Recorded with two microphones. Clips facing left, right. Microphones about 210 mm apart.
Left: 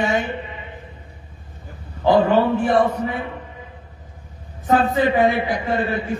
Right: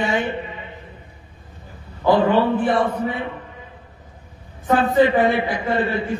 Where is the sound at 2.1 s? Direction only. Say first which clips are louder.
Left 1 dB; 45° left (ahead or behind).